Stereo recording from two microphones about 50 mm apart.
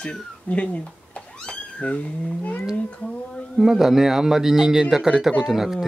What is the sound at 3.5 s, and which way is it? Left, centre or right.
Speech, centre.